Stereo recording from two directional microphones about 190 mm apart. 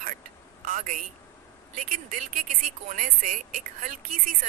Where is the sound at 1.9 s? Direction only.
45° right (ahead or behind).